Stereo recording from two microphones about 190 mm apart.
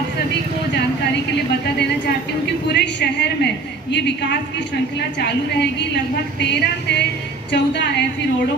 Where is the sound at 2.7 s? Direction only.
65° left (ahead or behind).